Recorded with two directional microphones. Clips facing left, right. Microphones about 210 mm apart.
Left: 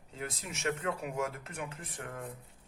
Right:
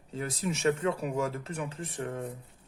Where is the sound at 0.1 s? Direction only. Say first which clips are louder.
Right 8 dB; 35° right (ahead or behind).